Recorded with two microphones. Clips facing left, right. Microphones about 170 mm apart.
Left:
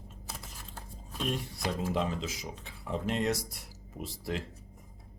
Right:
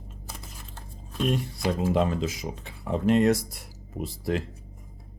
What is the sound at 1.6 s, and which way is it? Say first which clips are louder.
Speech: right 7 dB; 60° right (ahead or behind).